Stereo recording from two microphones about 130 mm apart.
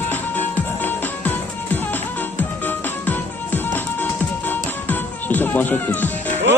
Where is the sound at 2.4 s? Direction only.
15° left (ahead or behind).